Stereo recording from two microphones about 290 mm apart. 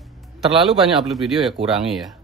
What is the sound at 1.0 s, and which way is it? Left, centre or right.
Speech, centre.